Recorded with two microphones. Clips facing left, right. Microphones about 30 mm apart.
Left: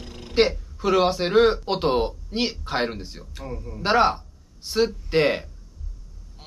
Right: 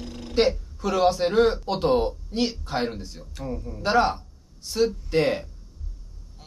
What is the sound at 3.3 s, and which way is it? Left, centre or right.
Speech, centre.